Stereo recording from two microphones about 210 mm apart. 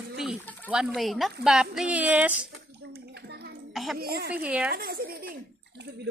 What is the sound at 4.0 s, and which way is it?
Speech, 45° right (ahead or behind).